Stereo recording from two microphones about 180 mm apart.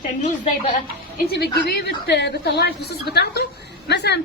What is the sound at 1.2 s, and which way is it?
A woman's voice, 60° left (ahead or behind).